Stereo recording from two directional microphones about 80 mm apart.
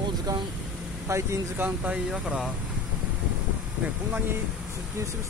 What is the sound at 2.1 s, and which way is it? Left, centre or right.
Speech, centre.